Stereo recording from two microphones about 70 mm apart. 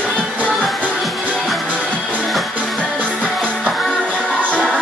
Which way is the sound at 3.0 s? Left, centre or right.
Centre.